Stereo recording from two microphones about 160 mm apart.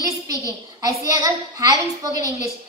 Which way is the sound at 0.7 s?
20° right (ahead or behind).